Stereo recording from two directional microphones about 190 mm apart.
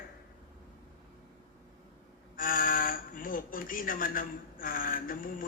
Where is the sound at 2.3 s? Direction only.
45° left (ahead or behind).